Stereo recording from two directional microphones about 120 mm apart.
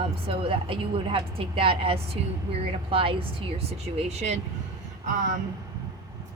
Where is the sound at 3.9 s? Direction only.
65° right (ahead or behind).